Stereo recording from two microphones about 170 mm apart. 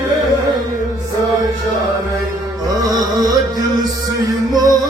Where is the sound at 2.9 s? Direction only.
25° right (ahead or behind).